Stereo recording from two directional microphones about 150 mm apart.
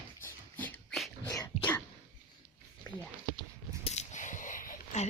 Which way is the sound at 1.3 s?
25° left (ahead or behind).